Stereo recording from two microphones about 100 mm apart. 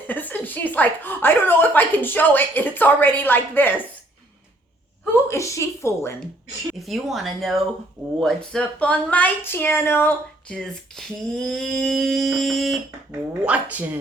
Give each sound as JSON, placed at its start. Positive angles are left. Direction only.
{"t": 0.1, "sound": "a woman's voice", "side_deg": 15}
{"t": 5.3, "sound": "a woman's voice", "side_deg": 30}
{"t": 6.7, "sound": "a sound", "side_deg": 0}
{"t": 8.2, "sound": "speech", "side_deg": 5}
{"t": 10.6, "sound": "a sound", "side_deg": 5}
{"t": 13.1, "sound": "speech", "side_deg": -15}